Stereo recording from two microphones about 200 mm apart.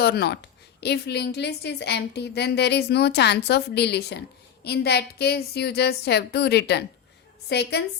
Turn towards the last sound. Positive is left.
turn(degrees=55)  # may be behind; listen again after turning